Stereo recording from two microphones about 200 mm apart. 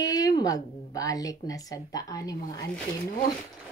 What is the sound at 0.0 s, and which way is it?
Speech, 20° left (ahead or behind).